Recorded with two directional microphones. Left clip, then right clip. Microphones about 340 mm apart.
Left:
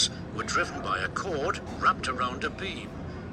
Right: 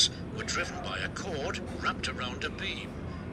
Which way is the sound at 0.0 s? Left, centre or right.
Left.